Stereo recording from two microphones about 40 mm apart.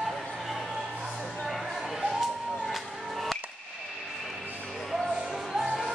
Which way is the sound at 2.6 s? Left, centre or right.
Centre.